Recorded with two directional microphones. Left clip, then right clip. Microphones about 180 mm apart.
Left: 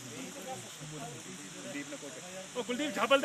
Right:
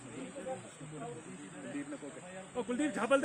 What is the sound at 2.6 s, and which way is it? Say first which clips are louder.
Speech: left 3 dB; 55° right (ahead or behind).